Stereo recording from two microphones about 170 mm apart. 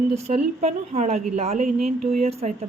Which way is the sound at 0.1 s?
40° right (ahead or behind).